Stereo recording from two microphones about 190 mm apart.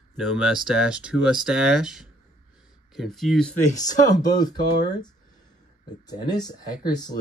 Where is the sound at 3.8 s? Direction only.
20° left (ahead or behind).